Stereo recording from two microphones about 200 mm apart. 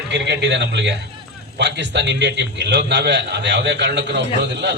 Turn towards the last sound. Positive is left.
turn(degrees=-60)  # may be behind; listen again after turning